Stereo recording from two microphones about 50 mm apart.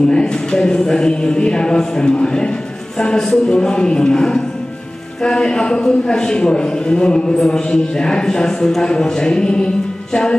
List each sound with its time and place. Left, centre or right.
0.1 s a man's voice: centre